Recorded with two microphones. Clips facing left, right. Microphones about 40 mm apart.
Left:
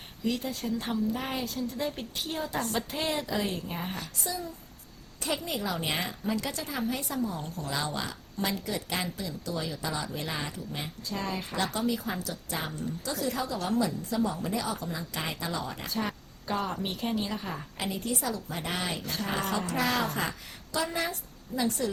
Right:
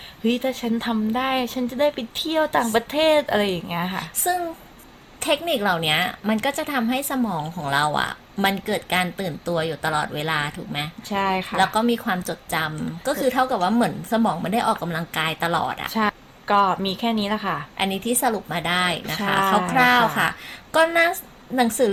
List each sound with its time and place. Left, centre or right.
0.2 s a woman's voice: right